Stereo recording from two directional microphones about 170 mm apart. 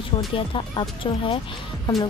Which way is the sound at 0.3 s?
30° left (ahead or behind).